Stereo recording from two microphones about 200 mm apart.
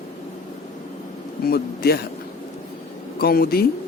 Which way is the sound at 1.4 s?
50° left (ahead or behind).